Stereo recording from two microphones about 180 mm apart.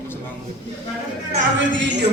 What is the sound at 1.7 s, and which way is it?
Speech, 85° right.